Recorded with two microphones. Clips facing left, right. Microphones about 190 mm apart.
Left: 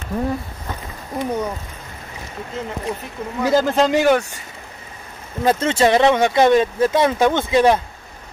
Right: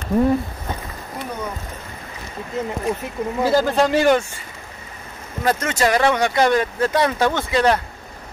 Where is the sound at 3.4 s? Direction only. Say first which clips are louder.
Left 2 dB; 20° left (ahead or behind).